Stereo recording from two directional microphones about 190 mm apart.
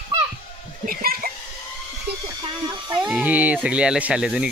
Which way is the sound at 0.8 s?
50° right (ahead or behind).